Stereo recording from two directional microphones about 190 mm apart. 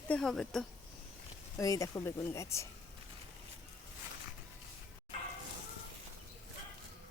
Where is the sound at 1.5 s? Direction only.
15° left (ahead or behind).